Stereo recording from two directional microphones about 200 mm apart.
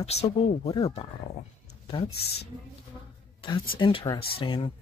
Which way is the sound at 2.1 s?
55° left (ahead or behind).